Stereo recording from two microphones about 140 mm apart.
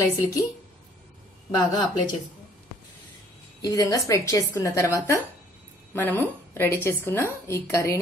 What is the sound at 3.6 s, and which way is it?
A woman's voice, 25° left (ahead or behind).